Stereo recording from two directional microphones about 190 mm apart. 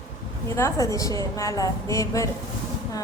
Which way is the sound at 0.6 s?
15° left (ahead or behind).